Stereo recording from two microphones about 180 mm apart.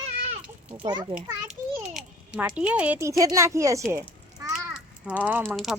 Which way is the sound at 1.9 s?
5° right (ahead or behind).